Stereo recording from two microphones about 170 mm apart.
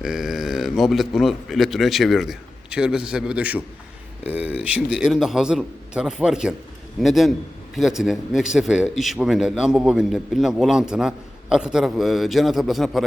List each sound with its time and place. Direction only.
0.0 s a man's voice: 5° right (ahead or behind)